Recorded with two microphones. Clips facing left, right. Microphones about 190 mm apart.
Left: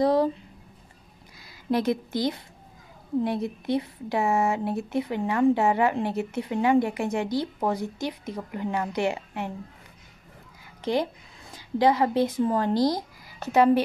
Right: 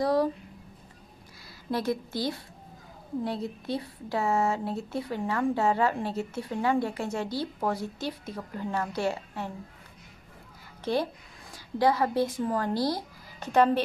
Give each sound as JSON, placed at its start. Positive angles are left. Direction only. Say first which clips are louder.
{"t": 0.0, "sound": "speech", "louder": "left 3 dB", "side_deg": 25}
{"t": 1.7, "sound": "a woman's voice", "louder": "left 5 dB", "side_deg": 20}
{"t": 10.8, "sound": "a woman's voice", "louder": "left 2 dB", "side_deg": 15}